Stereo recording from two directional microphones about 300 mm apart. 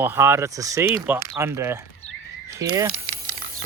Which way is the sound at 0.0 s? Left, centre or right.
Centre.